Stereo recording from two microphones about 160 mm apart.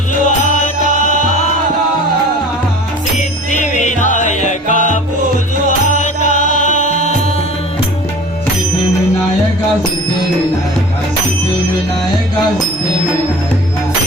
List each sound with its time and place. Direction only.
0.3 s music: 50° left (ahead or behind)
3.5 s music: 50° left (ahead or behind)
6.0 s music: 50° left (ahead or behind)